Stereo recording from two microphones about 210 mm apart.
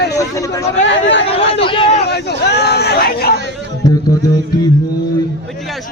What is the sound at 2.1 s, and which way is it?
Speech, 50° left (ahead or behind).